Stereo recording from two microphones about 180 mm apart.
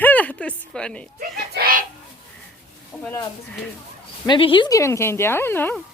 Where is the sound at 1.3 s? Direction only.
55° right (ahead or behind).